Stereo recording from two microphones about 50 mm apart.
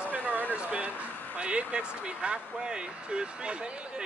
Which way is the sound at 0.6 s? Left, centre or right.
Right.